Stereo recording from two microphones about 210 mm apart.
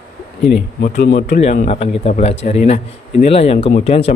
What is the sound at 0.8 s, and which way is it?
Speech, 45° left (ahead or behind).